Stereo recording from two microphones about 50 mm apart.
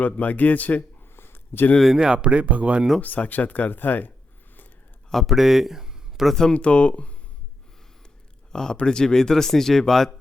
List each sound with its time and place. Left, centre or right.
0.0 s speech: left
1.1 s a sound: left
1.8 s speech: centre
2.1 s speech: right
3.2 s speech: left
5.3 s speech: centre
6.3 s speech: centre
8.5 s speech: centre